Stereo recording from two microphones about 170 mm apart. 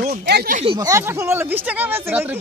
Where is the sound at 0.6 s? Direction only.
30° right (ahead or behind).